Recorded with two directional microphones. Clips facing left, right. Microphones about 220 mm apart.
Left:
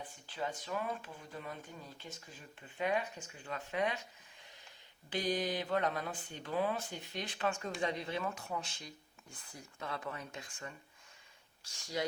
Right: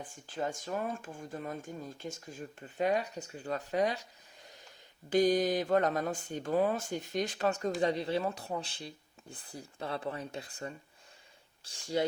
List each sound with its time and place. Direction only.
0.0 s speech: 45° right (ahead or behind)
5.0 s speech: 45° right (ahead or behind)